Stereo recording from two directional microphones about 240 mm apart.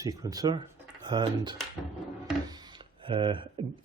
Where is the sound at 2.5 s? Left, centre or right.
Centre.